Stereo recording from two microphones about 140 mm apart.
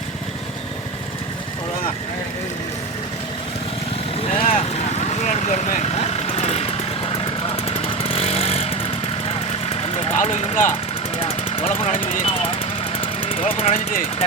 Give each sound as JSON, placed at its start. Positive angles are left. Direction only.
{"t": 4.2, "sound": "vehicle", "side_deg": 45}
{"t": 11.2, "sound": "vehicle", "side_deg": 45}
{"t": 12.2, "sound": "speech", "side_deg": 40}
{"t": 13.0, "sound": "vehicle", "side_deg": 40}